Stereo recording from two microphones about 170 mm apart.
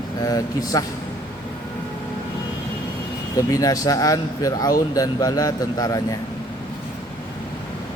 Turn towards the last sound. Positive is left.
turn(degrees=20)  # may be behind; listen again after turning